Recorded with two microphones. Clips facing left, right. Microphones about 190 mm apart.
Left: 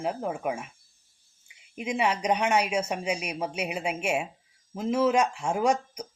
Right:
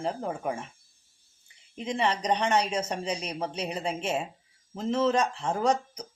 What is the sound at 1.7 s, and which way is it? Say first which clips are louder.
Speech: left 1 dB; 10° left (ahead or behind).